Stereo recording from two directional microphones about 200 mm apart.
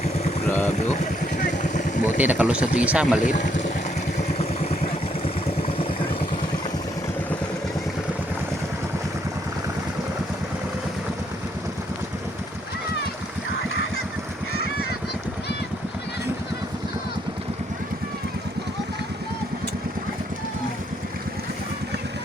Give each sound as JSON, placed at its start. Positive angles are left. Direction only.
{"t": 0.6, "sound": "speech", "side_deg": 35}
{"t": 1.5, "sound": "vehicle", "side_deg": 40}
{"t": 2.0, "sound": "speech", "side_deg": -10}
{"t": 3.2, "sound": "speech", "side_deg": 40}